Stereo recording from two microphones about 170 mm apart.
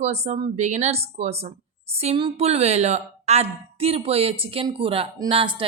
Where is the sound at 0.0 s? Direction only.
40° right (ahead or behind).